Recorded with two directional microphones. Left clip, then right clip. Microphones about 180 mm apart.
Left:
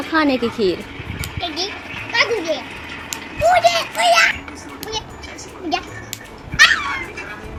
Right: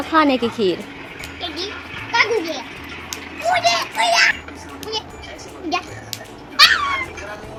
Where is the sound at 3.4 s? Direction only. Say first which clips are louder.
Left 4 dB; 30° left (ahead or behind).